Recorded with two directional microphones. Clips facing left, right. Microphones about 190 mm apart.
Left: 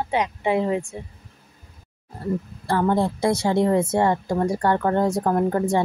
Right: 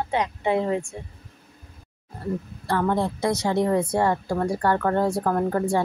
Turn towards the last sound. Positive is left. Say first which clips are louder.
# left 2 dB
turn(degrees=15)  # may be behind; listen again after turning